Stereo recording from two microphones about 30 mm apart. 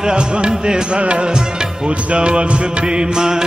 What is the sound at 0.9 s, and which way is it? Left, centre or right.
Music, right.